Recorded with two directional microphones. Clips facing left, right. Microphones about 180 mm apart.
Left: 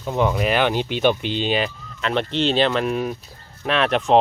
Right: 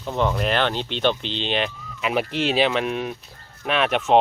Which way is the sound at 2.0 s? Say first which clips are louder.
Left 2 dB; 5° right (ahead or behind).